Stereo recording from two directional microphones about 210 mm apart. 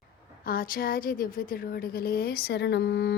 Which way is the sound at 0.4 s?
45° left (ahead or behind).